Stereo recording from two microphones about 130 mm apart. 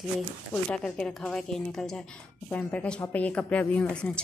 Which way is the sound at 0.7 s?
5° left (ahead or behind).